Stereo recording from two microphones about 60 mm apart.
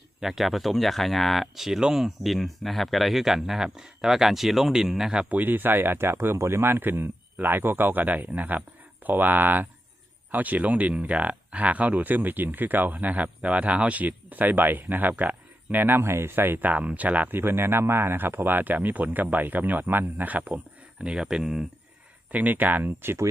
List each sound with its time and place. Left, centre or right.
0.2 s speech: centre
5.3 s speech: right
16.6 s speech: right
17.4 s speech: right
21.0 s speech: centre
22.3 s speech: right